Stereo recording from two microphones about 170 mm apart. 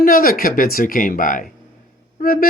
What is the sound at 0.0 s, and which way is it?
Speech, 55° left (ahead or behind).